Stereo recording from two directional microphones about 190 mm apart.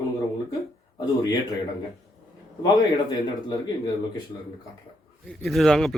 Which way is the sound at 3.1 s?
20° left (ahead or behind).